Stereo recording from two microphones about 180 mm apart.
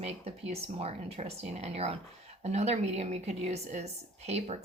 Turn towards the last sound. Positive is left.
turn(degrees=-35)  # may be behind; listen again after turning